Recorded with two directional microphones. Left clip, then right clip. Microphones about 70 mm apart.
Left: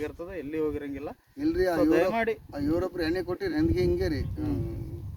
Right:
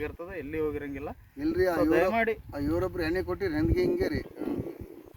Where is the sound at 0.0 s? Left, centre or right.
Right.